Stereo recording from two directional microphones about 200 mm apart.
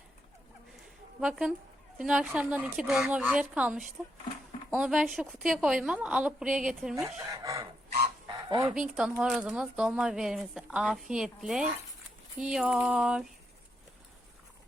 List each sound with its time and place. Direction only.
1.2 s speech: 5° right (ahead or behind)
7.3 s speech: 15° right (ahead or behind)
8.3 s fowl: 20° right (ahead or behind)
8.7 s speech: 5° right (ahead or behind)